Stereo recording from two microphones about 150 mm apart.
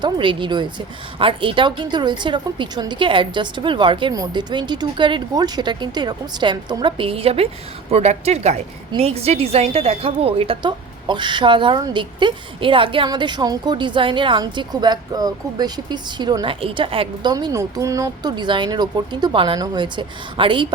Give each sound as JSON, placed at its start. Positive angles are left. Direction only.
{"t": 0.0, "sound": "a woman's voice", "side_deg": -35}
{"t": 17.3, "sound": "speech", "side_deg": -25}